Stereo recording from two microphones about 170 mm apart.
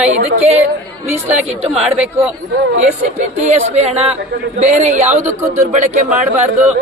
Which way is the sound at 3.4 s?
40° right (ahead or behind).